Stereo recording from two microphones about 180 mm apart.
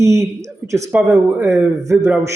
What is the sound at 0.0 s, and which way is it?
A man's voice, 15° right (ahead or behind).